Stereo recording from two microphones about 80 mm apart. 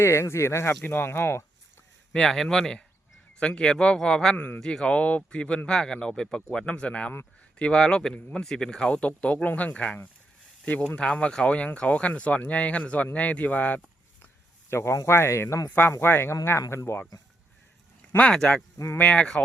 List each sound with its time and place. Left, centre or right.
0.0 s speech: left
2.1 s a man's voice: centre
14.7 s speech: left
18.2 s a man's voice: centre